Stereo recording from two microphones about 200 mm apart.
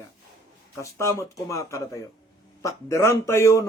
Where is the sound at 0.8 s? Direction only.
15° left (ahead or behind).